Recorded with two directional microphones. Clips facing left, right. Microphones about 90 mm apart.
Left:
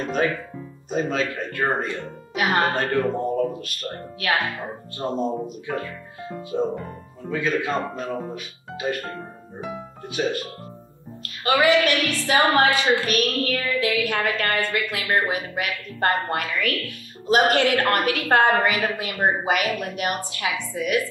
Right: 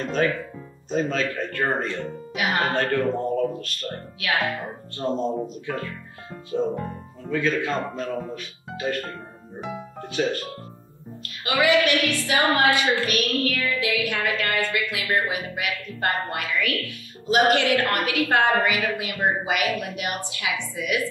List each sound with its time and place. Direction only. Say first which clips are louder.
0.2 s speech: right 1 dB; 10° left (ahead or behind)
2.3 s speech: left 3 dB; 40° left (ahead or behind)
2.7 s speech: even; 10° left (ahead or behind)
3.8 s a woman's voice: left 4 dB; 40° left (ahead or behind)
4.9 s speech: even; 10° left (ahead or behind)
7.2 s speech: even; 10° left (ahead or behind)
10.0 s speech: even; 10° left (ahead or behind)
11.4 s a woman's voice: left 2 dB; 40° left (ahead or behind)